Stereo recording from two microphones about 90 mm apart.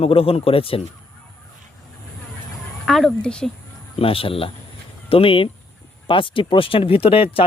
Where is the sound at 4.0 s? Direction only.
90° left.